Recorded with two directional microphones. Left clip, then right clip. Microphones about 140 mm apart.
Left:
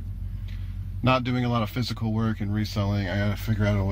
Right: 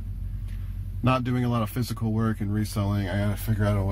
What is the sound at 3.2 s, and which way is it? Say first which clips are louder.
Speech: left 1 dB; centre (ahead or behind).